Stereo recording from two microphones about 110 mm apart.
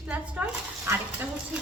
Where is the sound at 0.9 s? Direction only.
25° right (ahead or behind).